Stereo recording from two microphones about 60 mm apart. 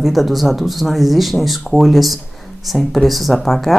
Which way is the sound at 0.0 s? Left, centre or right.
Centre.